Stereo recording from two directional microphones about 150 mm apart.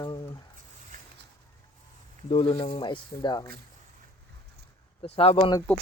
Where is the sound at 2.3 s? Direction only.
40° left (ahead or behind).